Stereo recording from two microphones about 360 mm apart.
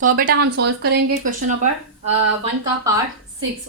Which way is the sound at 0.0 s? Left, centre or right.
Right.